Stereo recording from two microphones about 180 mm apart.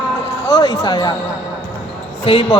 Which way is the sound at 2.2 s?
30° left (ahead or behind).